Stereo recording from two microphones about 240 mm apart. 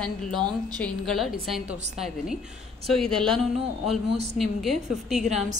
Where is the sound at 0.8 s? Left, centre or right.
Centre.